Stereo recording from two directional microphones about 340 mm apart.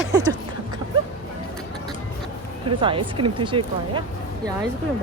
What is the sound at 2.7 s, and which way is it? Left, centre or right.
Speech, centre.